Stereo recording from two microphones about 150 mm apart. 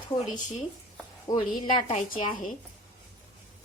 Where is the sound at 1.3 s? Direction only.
25° left (ahead or behind).